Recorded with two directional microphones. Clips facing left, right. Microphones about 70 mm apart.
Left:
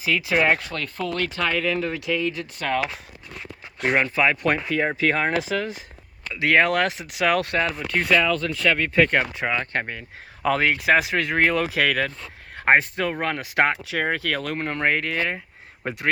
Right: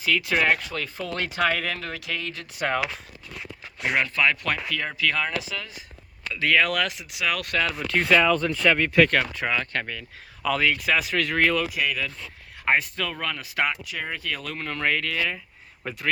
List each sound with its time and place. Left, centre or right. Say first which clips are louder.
0.0 s speech: left 2 dB; centre
0.7 s speech: left 2 dB; centre
1.1 s speech: right 2 dB; right
1.5 s speech: left 3 dB; centre
1.7 s speech: left 7 dB; centre
2.6 s speech: even; centre
3.9 s speech: left 2 dB; left
7.9 s speech: right 1 dB; centre
9.0 s speech: even; centre
9.7 s speech: left 3 dB; left
11.6 s speech: left 5 dB; left
12.5 s speech: left 5 dB; left